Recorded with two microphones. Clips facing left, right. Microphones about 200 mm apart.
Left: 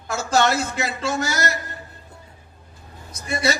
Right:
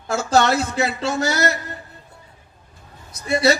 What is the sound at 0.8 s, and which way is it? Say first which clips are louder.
Speech: right 3 dB; 30° right (ahead or behind).